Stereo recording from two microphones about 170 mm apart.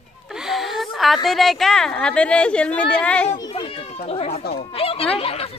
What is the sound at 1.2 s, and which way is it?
A woman's voice, centre (ahead or behind).